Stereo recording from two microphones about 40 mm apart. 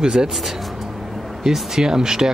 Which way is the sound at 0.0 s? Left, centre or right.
Centre.